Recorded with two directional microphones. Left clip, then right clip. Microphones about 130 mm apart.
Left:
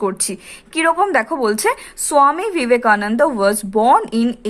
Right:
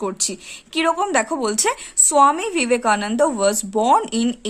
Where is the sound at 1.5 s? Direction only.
55° right (ahead or behind).